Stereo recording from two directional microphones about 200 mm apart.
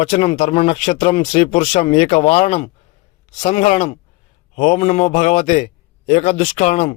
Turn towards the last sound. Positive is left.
turn(degrees=35)  # may be behind; listen again after turning